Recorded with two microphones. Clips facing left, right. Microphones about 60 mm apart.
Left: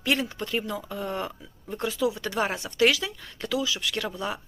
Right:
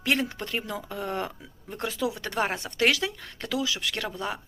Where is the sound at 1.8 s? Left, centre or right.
Right.